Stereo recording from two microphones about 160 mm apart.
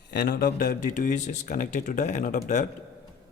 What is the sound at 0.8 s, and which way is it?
Speech, 55° left (ahead or behind).